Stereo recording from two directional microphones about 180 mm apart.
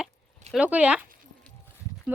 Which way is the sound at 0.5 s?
5° right (ahead or behind).